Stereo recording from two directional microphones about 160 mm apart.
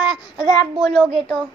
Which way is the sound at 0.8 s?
5° left (ahead or behind).